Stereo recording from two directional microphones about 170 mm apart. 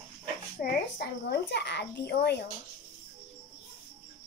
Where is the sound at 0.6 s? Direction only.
70° left (ahead or behind).